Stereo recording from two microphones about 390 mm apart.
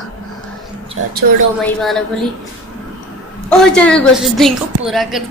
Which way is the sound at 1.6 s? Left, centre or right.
Centre.